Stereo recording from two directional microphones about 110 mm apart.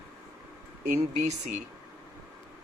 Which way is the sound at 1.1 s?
90° right.